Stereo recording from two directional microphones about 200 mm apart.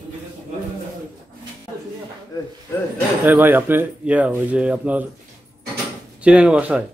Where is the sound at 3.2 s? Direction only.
10° right (ahead or behind).